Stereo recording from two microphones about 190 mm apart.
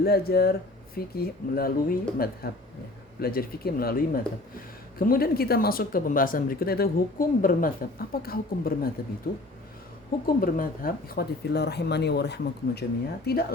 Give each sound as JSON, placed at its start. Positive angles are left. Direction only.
{"t": 0.0, "sound": "speech", "side_deg": 55}